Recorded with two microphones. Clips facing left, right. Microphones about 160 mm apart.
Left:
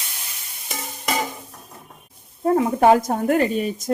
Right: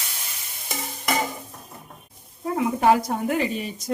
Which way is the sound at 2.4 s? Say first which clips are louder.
Left 5 dB; 50° left (ahead or behind).